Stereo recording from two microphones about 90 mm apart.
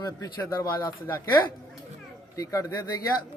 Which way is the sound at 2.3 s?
40° left (ahead or behind).